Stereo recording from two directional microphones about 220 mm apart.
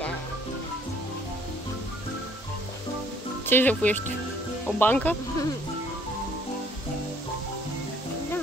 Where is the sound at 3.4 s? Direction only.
10° left (ahead or behind).